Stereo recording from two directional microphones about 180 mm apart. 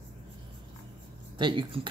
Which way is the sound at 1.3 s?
25° right (ahead or behind).